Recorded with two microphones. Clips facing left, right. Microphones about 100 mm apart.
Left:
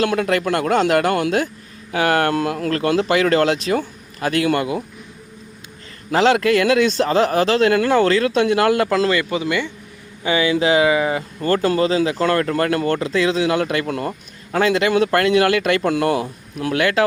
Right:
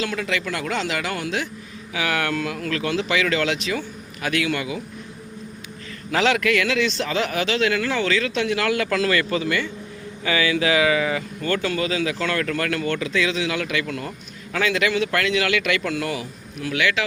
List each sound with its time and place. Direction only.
0.0 s speech: 55° left (ahead or behind)
6.1 s speech: 35° left (ahead or behind)
6.7 s speech: 45° left (ahead or behind)
15.9 s speech: 55° left (ahead or behind)